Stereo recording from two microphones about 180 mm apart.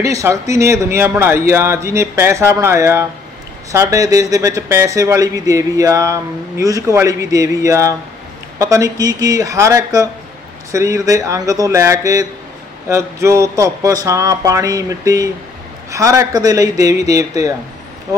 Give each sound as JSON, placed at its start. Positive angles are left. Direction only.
{"t": 0.0, "sound": "a man's voice", "side_deg": -15}